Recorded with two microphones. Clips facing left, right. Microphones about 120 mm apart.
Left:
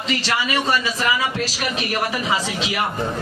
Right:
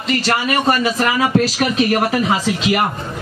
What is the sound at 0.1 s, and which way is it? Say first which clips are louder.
A man's voice: right 5 dB; 50° right (ahead or behind).